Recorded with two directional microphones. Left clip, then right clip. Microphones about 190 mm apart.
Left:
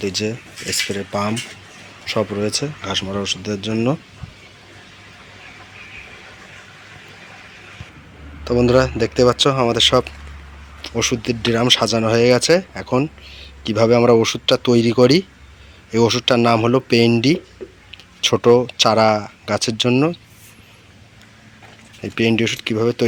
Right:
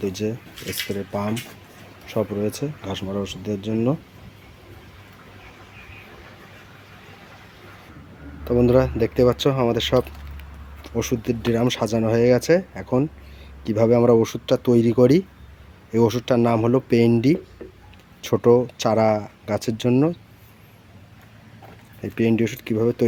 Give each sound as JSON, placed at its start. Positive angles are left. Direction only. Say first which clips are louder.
{"t": 0.0, "sound": "speech", "louder": "left 4 dB", "side_deg": -5}
{"t": 8.4, "sound": "speech", "louder": "left 3 dB", "side_deg": -5}
{"t": 18.4, "sound": "speech", "louder": "left 3 dB", "side_deg": -5}
{"t": 22.0, "sound": "speech", "louder": "left 4 dB", "side_deg": -5}